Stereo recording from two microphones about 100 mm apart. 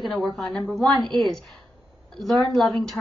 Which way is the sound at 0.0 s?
5° left (ahead or behind).